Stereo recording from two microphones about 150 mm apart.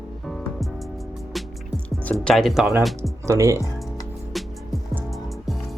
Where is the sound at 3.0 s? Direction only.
20° right (ahead or behind).